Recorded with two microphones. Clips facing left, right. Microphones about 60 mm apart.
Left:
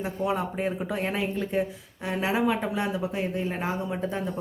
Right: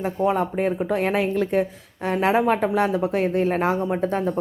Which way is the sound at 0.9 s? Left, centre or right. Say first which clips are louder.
Right 7 dB; right.